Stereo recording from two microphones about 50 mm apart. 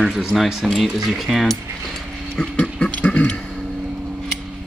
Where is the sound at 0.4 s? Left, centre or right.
Centre.